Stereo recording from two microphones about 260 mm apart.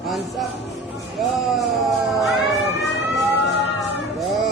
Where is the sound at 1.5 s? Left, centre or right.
Centre.